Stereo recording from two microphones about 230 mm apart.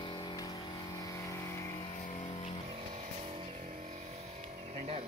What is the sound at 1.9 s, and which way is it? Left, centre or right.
Vehicle, left.